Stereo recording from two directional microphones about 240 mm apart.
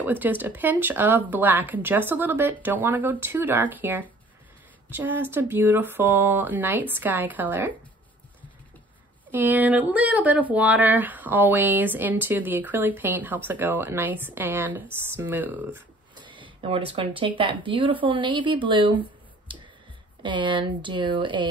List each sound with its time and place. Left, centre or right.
0.0 s speech: centre
9.3 s speech: centre
16.2 s a sound: centre
17.4 s speech: right